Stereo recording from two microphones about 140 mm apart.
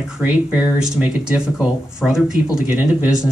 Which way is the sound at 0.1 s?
10° right (ahead or behind).